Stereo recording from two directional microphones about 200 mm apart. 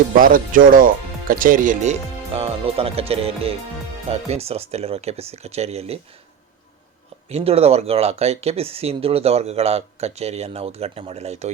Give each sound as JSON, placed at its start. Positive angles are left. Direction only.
{"t": 0.2, "sound": "speech", "side_deg": -45}
{"t": 7.3, "sound": "speech", "side_deg": -30}